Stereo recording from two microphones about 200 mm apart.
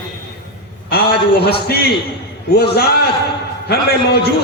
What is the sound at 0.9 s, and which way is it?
Speech, 50° left (ahead or behind).